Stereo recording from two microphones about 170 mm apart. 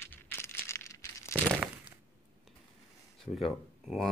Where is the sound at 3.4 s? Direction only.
Centre (ahead or behind).